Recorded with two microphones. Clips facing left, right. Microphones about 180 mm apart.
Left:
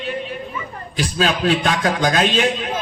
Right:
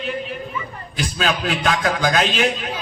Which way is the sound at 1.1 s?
35° left (ahead or behind).